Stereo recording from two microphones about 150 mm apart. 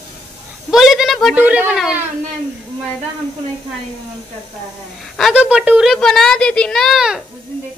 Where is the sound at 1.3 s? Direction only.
10° right (ahead or behind).